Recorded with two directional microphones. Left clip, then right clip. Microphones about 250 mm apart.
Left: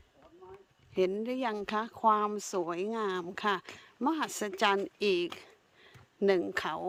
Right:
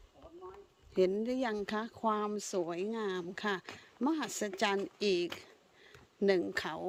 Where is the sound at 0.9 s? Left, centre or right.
Centre.